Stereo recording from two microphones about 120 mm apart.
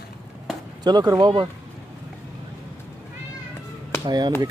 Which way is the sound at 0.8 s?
35° right (ahead or behind).